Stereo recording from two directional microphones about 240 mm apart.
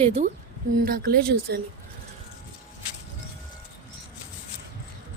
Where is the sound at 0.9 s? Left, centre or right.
Right.